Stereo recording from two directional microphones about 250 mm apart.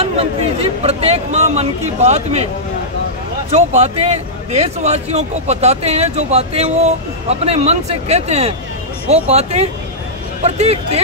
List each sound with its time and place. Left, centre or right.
0.0 s a man's voice: right
3.4 s a man's voice: right